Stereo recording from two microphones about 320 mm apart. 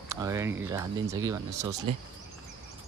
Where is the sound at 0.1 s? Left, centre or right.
Centre.